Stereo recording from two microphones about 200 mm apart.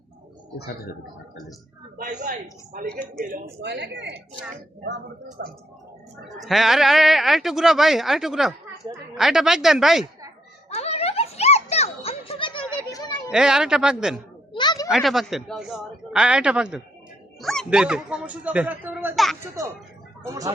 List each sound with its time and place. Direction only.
2.0 s a woman's voice: 40° right (ahead or behind); by 4.0 s 60° right (ahead or behind)
6.2 s speech: centre (ahead or behind)
10.7 s music: 30° left (ahead or behind)
13.3 s speech: 5° right (ahead or behind)
14.5 s a sound: 20° left (ahead or behind)
14.8 s speech: centre (ahead or behind)
20.2 s speech: 15° right (ahead or behind)